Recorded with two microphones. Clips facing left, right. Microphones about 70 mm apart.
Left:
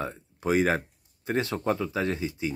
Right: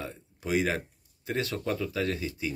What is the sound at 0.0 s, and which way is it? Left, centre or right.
Speech, left.